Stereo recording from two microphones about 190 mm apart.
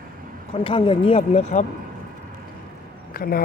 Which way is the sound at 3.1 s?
50° left (ahead or behind).